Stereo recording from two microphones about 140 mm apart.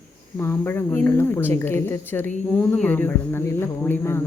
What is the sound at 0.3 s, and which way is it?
Speech, 15° left (ahead or behind).